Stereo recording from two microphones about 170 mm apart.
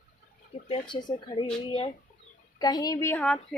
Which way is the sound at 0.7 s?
30° left (ahead or behind).